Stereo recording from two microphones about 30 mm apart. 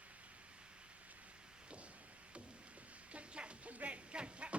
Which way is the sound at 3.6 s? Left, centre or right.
Right.